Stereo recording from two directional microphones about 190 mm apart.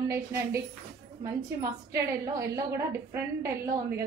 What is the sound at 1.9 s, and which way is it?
Speech, 15° right (ahead or behind).